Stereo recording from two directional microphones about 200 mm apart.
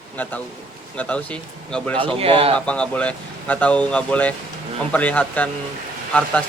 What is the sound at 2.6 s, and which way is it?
Speech, 5° left (ahead or behind).